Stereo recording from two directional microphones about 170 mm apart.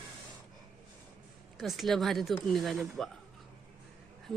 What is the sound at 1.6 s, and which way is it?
A woman's voice, centre (ahead or behind).